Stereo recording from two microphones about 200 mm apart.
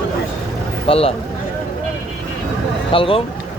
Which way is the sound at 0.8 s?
30° left (ahead or behind).